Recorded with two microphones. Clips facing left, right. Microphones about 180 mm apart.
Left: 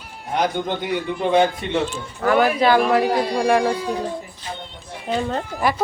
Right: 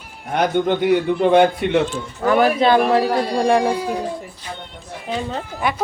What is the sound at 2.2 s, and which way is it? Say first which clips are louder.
Speech: right 1 dB; 20° right (ahead or behind).